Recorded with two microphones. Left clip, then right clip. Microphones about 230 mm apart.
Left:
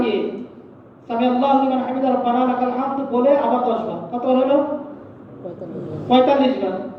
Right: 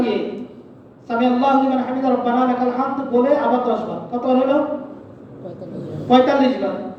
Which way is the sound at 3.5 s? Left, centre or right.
Right.